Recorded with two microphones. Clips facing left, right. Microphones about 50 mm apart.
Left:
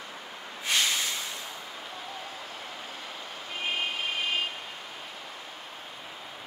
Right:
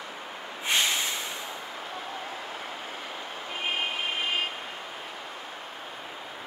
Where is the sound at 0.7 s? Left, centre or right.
Right.